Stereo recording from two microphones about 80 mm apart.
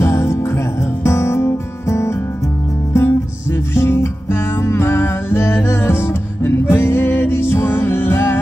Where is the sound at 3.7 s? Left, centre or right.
Left.